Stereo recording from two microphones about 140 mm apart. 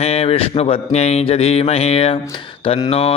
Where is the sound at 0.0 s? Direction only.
50° left (ahead or behind).